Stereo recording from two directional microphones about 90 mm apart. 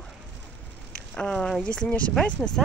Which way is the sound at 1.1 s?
10° left (ahead or behind).